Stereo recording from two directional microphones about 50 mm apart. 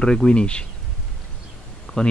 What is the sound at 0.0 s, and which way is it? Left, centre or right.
Speech, centre.